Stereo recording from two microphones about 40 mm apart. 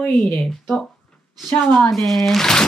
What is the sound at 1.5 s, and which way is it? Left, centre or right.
Speech, left.